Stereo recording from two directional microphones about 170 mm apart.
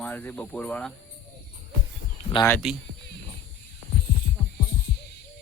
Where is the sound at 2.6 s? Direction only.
5° right (ahead or behind).